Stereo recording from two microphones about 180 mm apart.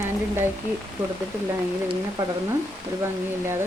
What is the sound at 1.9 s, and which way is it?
Speech, 20° right (ahead or behind).